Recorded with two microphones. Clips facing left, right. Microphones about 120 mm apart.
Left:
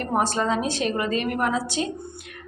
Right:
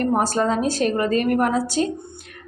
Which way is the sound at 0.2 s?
40° right (ahead or behind).